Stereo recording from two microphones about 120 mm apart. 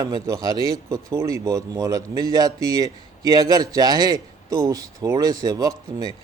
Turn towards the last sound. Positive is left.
turn(degrees=-35)  # may be behind; listen again after turning